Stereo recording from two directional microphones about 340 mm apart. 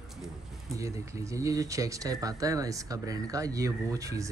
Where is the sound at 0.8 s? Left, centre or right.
Centre.